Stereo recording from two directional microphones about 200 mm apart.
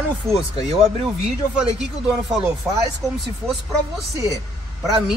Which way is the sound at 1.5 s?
Centre (ahead or behind).